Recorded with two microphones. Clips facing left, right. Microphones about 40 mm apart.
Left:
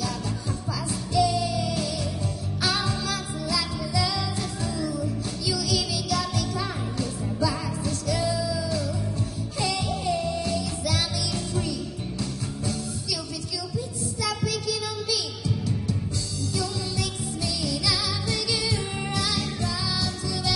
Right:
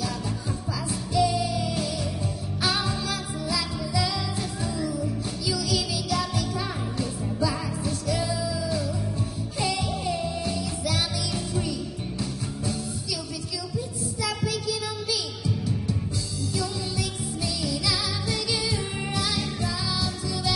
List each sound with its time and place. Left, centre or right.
1.1 s music: centre
7.8 s music: centre
10.1 s music: centre
14.2 s music: right
18.3 s music: centre